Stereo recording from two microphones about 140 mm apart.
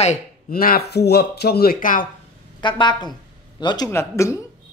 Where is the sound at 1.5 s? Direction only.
90° left.